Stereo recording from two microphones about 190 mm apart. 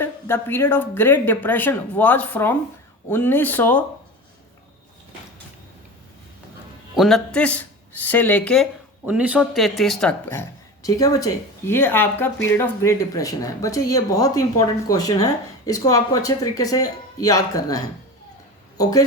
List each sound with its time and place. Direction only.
0.0 s speech: 10° left (ahead or behind)
6.9 s speech: centre (ahead or behind)
9.0 s speech: 10° right (ahead or behind); by 19.0 s 20° left (ahead or behind)